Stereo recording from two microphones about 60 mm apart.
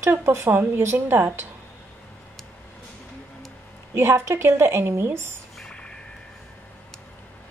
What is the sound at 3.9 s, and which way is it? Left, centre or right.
A woman's voice, right.